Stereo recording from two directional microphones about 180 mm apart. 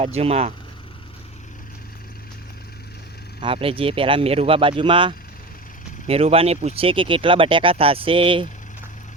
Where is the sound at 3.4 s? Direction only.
30° right (ahead or behind).